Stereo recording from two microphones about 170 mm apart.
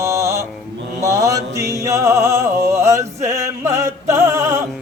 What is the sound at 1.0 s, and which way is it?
Music, 20° right (ahead or behind).